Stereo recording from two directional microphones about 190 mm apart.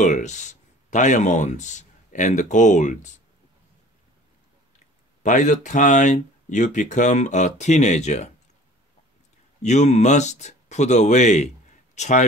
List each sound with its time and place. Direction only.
0.0 s speech: 40° left (ahead or behind)
5.2 s speech: 40° left (ahead or behind)
9.6 s speech: 35° left (ahead or behind)